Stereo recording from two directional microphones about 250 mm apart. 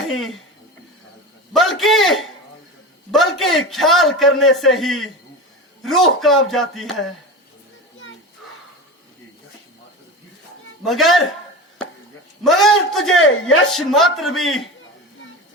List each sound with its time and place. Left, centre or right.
1.5 s a man's voice: centre
10.8 s a man's voice: centre
12.4 s a man's voice: centre
13.1 s speech: left
13.7 s a man's voice: centre